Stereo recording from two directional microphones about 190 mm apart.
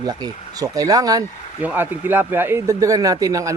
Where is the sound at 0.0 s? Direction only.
20° right (ahead or behind).